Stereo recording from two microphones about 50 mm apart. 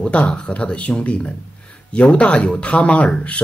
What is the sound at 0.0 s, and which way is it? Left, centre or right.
Speech, centre.